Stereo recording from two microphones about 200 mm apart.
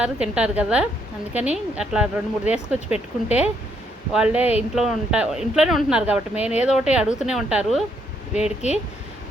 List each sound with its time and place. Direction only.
0.0 s speech: 5° right (ahead or behind)
2.9 s speech: 30° left (ahead or behind)
4.1 s speech: 5° right (ahead or behind)
8.6 s speech: 35° left (ahead or behind)